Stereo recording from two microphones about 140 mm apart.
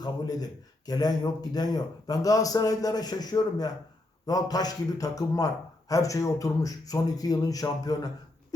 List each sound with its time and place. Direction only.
0.0 s a man's voice: 30° left (ahead or behind)